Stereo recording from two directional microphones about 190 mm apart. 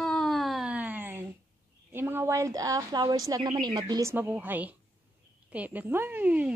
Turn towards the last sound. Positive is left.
turn(degrees=-5)  # may be behind; listen again after turning